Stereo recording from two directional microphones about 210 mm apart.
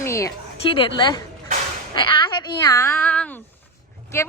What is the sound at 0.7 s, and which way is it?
Speech, 25° left (ahead or behind).